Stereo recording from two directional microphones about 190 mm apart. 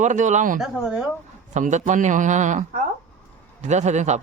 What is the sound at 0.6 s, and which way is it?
Speech, 5° right (ahead or behind).